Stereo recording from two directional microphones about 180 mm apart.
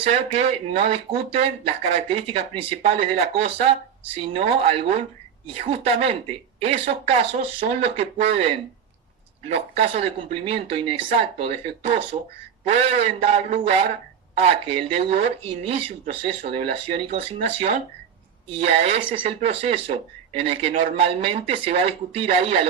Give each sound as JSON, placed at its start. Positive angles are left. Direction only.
{"t": 0.0, "sound": "speech", "side_deg": -35}